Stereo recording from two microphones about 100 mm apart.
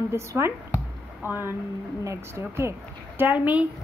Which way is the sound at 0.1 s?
25° right (ahead or behind).